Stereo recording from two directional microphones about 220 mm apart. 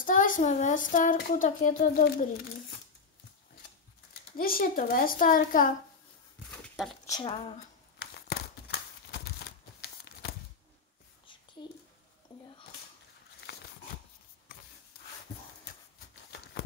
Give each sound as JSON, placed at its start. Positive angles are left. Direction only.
{"t": 0.0, "sound": "speech", "side_deg": 35}
{"t": 4.4, "sound": "speech", "side_deg": 40}
{"t": 7.1, "sound": "speech", "side_deg": 20}
{"t": 8.0, "sound": "a sound", "side_deg": 45}